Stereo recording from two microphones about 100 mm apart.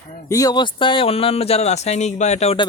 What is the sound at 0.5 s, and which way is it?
Speech, 55° left (ahead or behind).